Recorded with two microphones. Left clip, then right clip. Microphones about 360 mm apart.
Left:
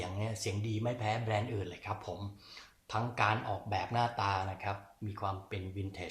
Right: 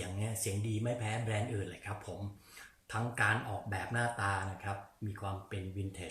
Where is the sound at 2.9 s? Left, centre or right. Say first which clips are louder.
Left 1 dB; centre.